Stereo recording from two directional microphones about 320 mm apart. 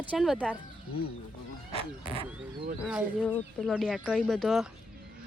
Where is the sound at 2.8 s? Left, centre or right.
Centre.